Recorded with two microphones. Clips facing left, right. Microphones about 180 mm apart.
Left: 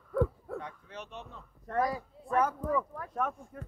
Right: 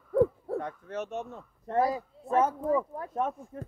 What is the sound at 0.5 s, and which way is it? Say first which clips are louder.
Speech: right 8 dB; 50° right (ahead or behind).